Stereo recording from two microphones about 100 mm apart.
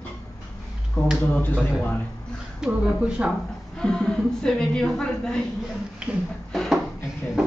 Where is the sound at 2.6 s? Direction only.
10° right (ahead or behind).